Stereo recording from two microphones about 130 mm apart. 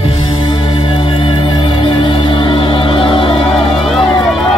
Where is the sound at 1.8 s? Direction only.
40° left (ahead or behind).